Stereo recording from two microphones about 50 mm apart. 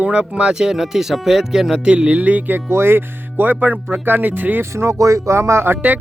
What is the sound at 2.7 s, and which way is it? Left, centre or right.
Speech, right.